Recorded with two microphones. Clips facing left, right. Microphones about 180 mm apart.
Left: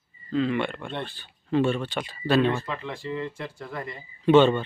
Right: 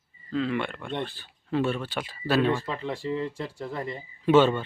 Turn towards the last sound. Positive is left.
turn(degrees=-5)  # may be behind; listen again after turning